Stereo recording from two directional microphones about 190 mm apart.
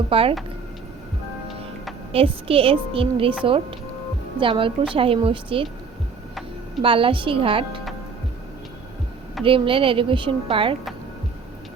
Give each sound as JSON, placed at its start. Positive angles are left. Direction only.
{"t": 0.1, "sound": "speech", "side_deg": -30}
{"t": 2.1, "sound": "speech", "side_deg": -30}
{"t": 6.8, "sound": "speech", "side_deg": -25}
{"t": 9.4, "sound": "speech", "side_deg": -25}